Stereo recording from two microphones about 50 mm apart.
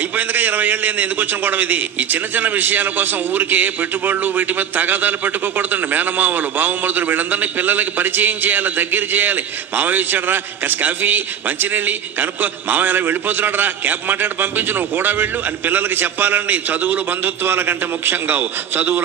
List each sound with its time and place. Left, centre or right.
0.3 s a man's voice: right
17.5 s a man's voice: right